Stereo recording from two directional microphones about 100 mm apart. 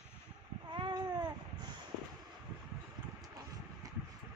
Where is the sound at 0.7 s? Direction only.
50° right (ahead or behind).